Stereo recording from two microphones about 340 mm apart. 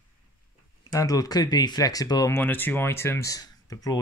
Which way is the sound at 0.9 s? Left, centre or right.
Centre.